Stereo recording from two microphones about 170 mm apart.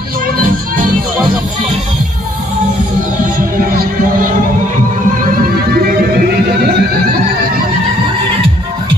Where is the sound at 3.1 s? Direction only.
60° right (ahead or behind).